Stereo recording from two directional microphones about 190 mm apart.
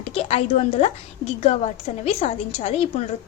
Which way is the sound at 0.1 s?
30° left (ahead or behind).